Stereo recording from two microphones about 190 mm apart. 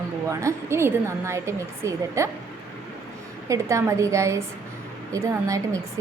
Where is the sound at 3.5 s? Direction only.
15° right (ahead or behind).